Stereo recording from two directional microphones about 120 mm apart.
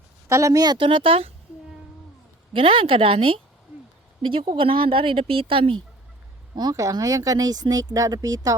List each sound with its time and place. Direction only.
0.3 s speech: 25° right (ahead or behind); by 1.3 s 50° right (ahead or behind)
2.5 s speech: 50° right (ahead or behind)
6.6 s speech: 30° right (ahead or behind)